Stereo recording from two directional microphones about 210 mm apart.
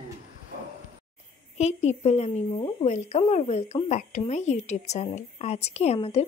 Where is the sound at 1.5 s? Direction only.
30° left (ahead or behind).